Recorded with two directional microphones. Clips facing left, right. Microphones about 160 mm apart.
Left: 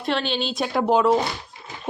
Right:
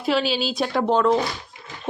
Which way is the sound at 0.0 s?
5° right (ahead or behind).